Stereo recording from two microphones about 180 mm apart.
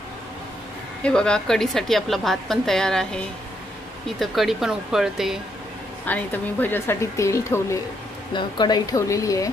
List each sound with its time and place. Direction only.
1.0 s a woman's voice: 5° left (ahead or behind)
6.0 s a woman's voice: 10° left (ahead or behind)